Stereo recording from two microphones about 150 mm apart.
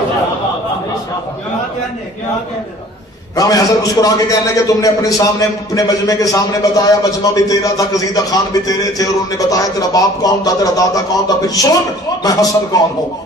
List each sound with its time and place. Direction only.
3.3 s a man's voice: 25° left (ahead or behind)